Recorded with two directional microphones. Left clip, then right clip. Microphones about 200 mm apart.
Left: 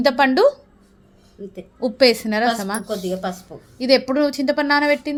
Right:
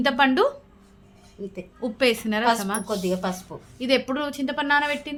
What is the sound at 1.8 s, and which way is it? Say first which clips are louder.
A woman's voice: left 7 dB; 25° left (ahead or behind).